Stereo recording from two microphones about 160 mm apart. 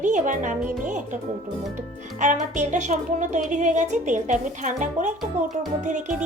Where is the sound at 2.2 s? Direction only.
50° right (ahead or behind).